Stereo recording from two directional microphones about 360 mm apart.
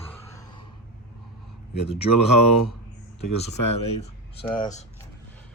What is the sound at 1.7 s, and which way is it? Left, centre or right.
Speech, centre.